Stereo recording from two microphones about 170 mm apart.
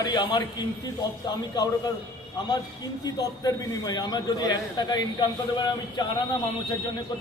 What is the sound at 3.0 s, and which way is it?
A man's voice, 20° left (ahead or behind).